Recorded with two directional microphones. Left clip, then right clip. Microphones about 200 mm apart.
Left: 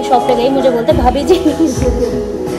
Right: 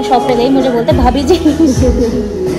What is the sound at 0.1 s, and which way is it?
Speech, 5° left (ahead or behind).